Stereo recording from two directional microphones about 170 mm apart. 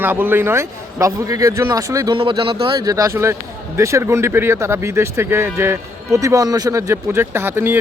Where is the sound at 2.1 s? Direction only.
30° right (ahead or behind).